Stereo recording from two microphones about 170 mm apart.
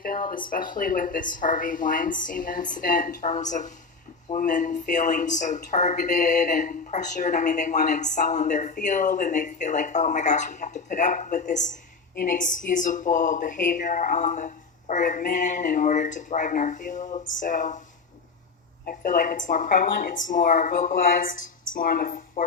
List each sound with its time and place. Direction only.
0.0 s a sound: 55° left (ahead or behind)
0.5 s speech: 55° left (ahead or behind)
18.9 s speech: 50° left (ahead or behind)